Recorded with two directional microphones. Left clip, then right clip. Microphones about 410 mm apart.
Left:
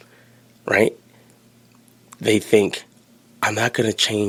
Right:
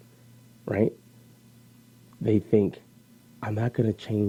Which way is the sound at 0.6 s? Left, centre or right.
Centre.